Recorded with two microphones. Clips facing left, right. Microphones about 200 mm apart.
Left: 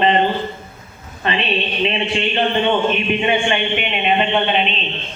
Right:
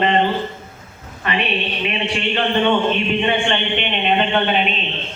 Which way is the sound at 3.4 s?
10° left (ahead or behind).